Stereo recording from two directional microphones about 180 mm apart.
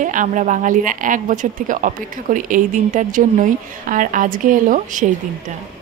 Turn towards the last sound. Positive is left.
turn(degrees=-45)  # may be behind; listen again after turning